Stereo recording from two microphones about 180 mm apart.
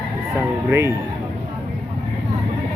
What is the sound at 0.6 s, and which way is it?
Speech, 15° right (ahead or behind).